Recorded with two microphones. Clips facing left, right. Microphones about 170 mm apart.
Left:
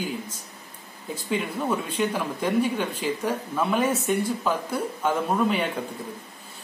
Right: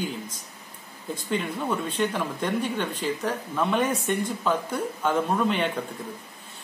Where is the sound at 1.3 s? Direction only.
5° left (ahead or behind).